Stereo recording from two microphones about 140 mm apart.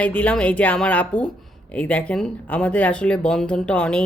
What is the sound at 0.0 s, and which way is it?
Speech, 10° left (ahead or behind).